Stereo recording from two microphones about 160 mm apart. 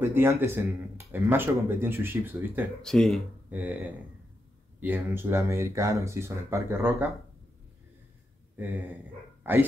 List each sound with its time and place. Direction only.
0.0 s speech: 15° right (ahead or behind)
2.8 s speech: 5° left (ahead or behind)
3.4 s speech: 10° right (ahead or behind)
4.7 s speech: 10° right (ahead or behind)
8.5 s speech: 10° right (ahead or behind)